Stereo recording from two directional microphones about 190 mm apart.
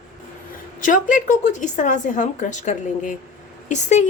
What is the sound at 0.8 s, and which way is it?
Speech, 45° left (ahead or behind).